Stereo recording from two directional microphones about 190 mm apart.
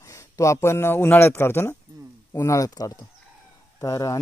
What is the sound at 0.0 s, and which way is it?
A woman's voice, 15° left (ahead or behind).